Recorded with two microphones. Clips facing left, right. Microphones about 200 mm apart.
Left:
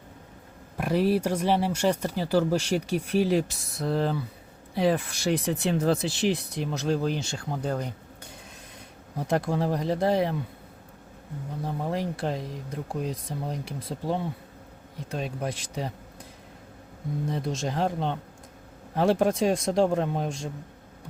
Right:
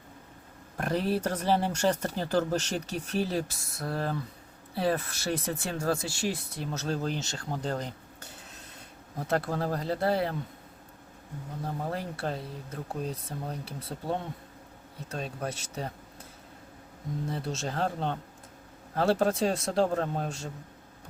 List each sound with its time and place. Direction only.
0.8 s speech: 10° left (ahead or behind)
11.6 s speech: 15° left (ahead or behind)
17.2 s speech: 15° left (ahead or behind)